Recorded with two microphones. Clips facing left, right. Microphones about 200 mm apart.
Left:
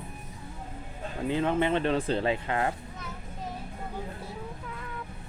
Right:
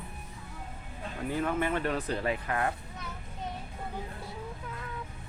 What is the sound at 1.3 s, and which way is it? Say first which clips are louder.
Speech: left 4 dB; 25° left (ahead or behind).